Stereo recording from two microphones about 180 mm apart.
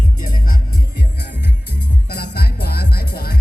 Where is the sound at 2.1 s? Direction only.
60° left (ahead or behind).